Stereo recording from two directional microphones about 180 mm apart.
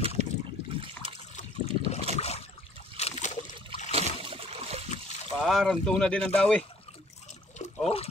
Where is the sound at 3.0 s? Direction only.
45° left (ahead or behind).